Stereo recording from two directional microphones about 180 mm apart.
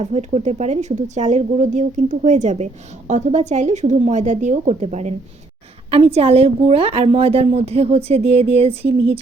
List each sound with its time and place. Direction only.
0.0 s a woman's voice: 40° right (ahead or behind)